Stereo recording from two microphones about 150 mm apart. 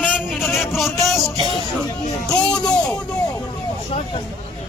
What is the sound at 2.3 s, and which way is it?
Music, 5° left (ahead or behind).